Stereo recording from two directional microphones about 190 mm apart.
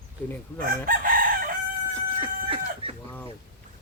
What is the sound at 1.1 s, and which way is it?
Chicken, 50° right (ahead or behind).